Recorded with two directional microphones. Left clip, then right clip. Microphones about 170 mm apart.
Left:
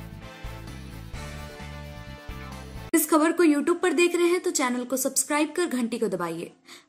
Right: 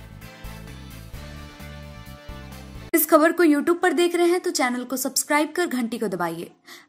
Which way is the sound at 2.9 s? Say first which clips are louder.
Right 4 dB; 35° right (ahead or behind).